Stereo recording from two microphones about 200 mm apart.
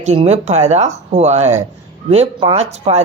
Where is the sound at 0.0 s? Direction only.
35° right (ahead or behind).